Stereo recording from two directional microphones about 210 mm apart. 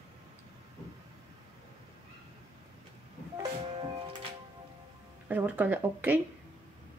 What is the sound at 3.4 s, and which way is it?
Music, 20° right (ahead or behind).